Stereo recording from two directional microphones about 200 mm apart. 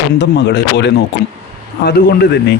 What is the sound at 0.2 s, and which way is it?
A man's voice, 60° left (ahead or behind).